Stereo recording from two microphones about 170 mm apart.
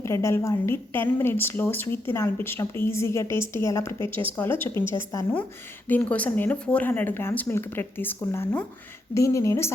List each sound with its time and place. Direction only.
0.0 s a woman's voice: 15° left (ahead or behind)